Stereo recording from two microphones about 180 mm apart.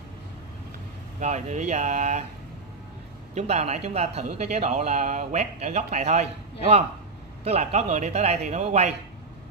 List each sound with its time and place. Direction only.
1.2 s speech: 40° right (ahead or behind)
3.3 s speech: 40° right (ahead or behind)
7.4 s speech: 40° right (ahead or behind)